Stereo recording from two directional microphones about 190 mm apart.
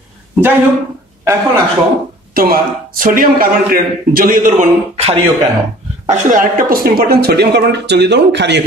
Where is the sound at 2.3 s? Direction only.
50° right (ahead or behind).